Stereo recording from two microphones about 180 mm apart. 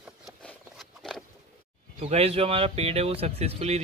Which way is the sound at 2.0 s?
35° right (ahead or behind).